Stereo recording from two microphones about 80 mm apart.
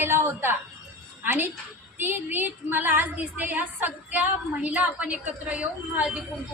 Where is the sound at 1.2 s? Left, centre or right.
Right.